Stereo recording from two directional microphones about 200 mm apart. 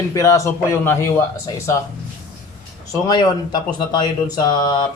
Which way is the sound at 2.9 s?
20° left (ahead or behind).